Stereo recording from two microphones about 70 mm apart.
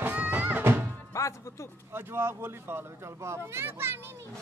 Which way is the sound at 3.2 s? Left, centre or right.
Right.